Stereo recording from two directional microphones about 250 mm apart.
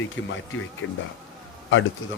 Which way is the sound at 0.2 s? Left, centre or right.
Left.